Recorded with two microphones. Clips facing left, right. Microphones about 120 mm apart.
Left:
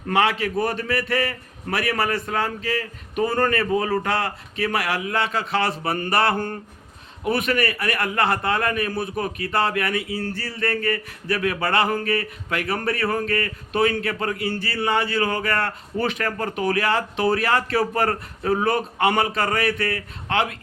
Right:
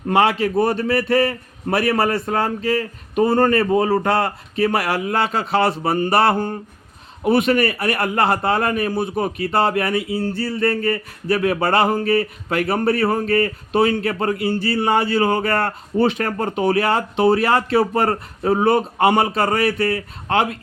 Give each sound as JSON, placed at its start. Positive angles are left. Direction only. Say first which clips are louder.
{"t": 0.1, "sound": "speech", "louder": "right 4 dB", "side_deg": -35}
{"t": 6.3, "sound": "speech", "louder": "right 4 dB", "side_deg": -15}
{"t": 7.3, "sound": "speech", "louder": "right 6 dB", "side_deg": -30}
{"t": 10.1, "sound": "a sound", "louder": "right 5 dB", "side_deg": -20}
{"t": 10.3, "sound": "speech", "louder": "right 7 dB", "side_deg": -35}